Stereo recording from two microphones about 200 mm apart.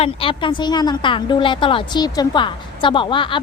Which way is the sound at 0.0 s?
25° left (ahead or behind).